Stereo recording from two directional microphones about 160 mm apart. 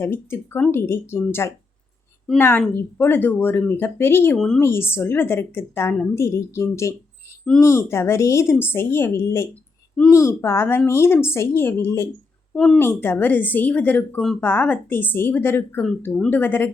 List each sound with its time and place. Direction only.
0.0 s a woman's voice: 15° left (ahead or behind)
4.6 s a woman's voice: 15° left (ahead or behind)
12.5 s speech: 5° left (ahead or behind)
12.8 s a woman's voice: 15° left (ahead or behind)